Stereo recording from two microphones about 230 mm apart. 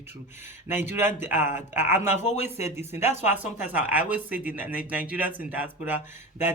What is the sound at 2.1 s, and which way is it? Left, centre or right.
Speech, left.